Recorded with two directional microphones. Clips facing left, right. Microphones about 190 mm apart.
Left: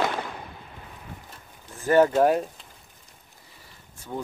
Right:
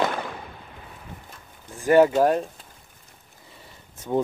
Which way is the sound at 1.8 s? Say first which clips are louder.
Right 2 dB; 15° right (ahead or behind).